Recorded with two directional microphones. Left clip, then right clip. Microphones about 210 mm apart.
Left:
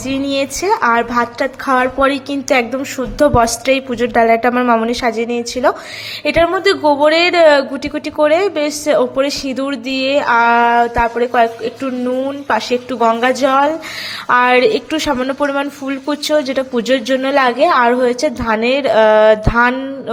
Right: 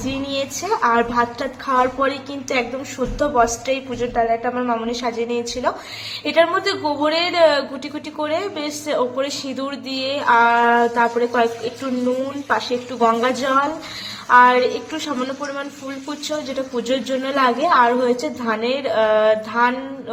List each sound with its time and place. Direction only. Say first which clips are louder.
0.1 s a woman's voice: left 8 dB; 35° left (ahead or behind)